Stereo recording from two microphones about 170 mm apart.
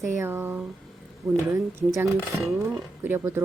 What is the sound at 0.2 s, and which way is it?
Speech, 15° right (ahead or behind).